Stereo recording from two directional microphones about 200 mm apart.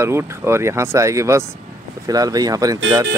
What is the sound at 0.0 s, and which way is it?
Speech, 15° right (ahead or behind).